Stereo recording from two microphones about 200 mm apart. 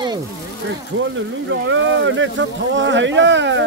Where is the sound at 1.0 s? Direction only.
70° right (ahead or behind).